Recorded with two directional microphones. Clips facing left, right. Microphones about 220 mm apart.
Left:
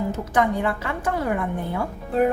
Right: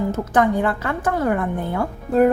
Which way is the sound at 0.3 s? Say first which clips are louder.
Right 3 dB; 50° right (ahead or behind).